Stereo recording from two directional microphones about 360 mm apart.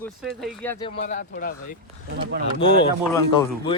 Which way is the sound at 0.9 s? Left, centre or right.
Left.